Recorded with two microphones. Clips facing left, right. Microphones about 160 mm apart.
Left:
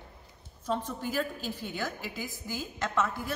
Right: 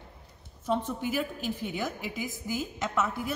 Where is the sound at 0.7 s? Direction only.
15° right (ahead or behind).